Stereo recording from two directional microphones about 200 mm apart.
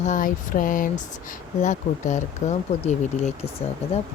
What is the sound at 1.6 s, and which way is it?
Speech, 35° left (ahead or behind).